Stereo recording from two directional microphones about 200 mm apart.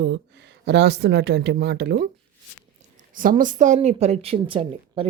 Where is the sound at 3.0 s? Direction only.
40° right (ahead or behind).